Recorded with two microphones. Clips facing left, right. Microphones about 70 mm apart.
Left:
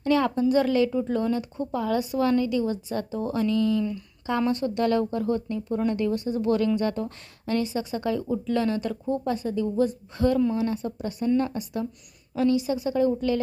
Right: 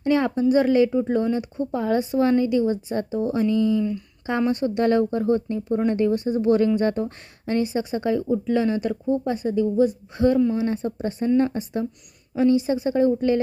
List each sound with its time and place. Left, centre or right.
0.0 s speech: right